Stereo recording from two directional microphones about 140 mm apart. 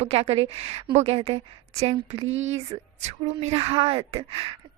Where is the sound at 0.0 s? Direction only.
45° right (ahead or behind).